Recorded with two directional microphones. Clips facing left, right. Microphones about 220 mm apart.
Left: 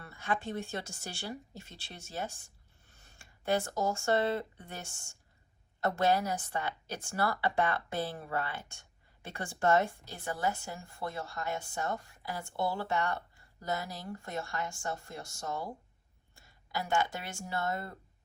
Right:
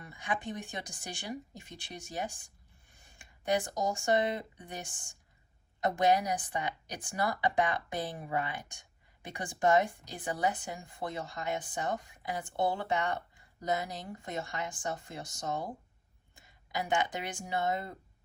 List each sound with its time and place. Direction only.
0.0 s a woman's voice: 15° right (ahead or behind)